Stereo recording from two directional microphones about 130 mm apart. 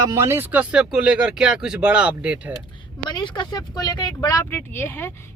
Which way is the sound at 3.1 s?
35° left (ahead or behind).